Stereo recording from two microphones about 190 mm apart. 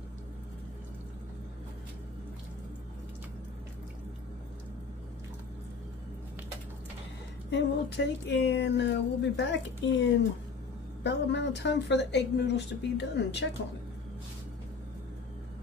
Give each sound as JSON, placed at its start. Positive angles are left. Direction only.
{"t": 7.5, "sound": "speech", "side_deg": 65}
{"t": 11.1, "sound": "speech", "side_deg": 65}